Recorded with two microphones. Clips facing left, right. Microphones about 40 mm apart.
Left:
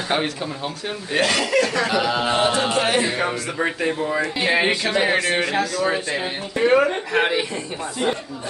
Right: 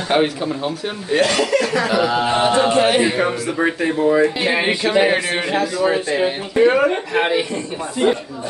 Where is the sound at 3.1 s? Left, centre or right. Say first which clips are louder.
Right 4 dB; centre.